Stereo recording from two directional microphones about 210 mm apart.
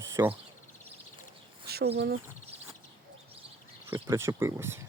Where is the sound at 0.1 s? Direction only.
10° right (ahead or behind).